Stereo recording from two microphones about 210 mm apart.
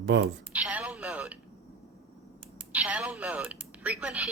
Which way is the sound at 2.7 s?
5° right (ahead or behind).